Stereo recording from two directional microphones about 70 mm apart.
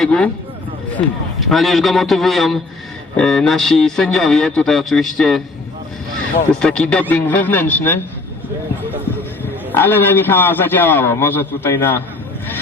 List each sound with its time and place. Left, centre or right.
0.0 s speech: centre
1.4 s a man's voice: centre
6.5 s speech: centre
7.1 s speech: left
9.7 s a man's voice: left